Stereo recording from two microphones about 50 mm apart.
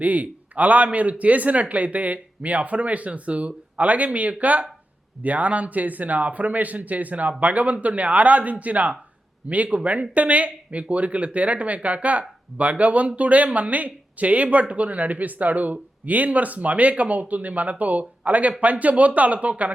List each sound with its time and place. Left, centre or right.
0.0 s speech: right